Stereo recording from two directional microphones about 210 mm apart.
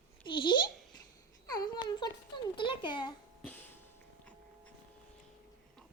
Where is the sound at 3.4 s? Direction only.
5° left (ahead or behind).